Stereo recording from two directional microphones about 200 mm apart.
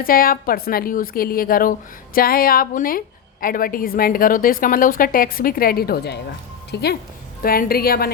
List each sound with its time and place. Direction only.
0.0 s a woman's voice: 45° left (ahead or behind)